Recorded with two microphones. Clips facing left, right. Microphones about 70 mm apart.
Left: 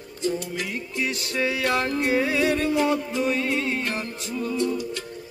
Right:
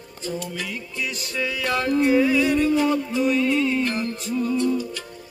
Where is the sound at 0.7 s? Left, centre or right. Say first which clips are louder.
Left 2 dB; left.